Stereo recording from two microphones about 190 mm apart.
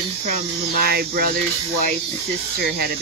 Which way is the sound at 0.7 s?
55° right (ahead or behind).